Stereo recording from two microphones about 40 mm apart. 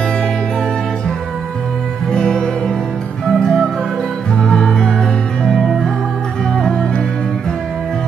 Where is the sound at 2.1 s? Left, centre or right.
Centre.